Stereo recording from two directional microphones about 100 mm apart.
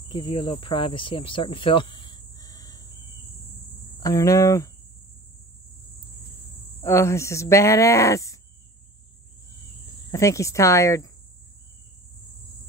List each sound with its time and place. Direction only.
0.1 s speech: 55° left (ahead or behind); by 2.9 s 40° left (ahead or behind)
4.0 s speech: 35° left (ahead or behind)
6.8 s speech: 25° left (ahead or behind)
10.1 s speech: 30° left (ahead or behind)